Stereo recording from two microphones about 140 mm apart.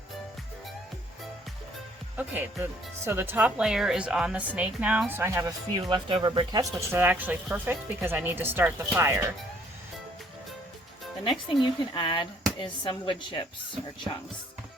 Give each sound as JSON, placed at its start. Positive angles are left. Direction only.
{"t": 2.1, "sound": "speech", "side_deg": -15}
{"t": 5.9, "sound": "speech", "side_deg": -35}
{"t": 11.2, "sound": "speech", "side_deg": 35}